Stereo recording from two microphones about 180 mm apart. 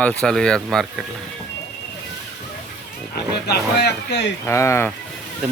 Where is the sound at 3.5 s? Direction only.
65° left (ahead or behind).